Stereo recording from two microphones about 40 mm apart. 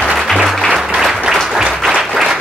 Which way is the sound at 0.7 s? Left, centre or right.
Centre.